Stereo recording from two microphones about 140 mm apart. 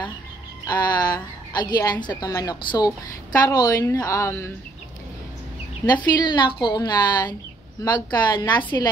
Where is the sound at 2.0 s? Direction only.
25° left (ahead or behind).